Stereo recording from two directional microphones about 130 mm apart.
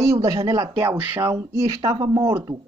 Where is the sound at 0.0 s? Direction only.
25° right (ahead or behind).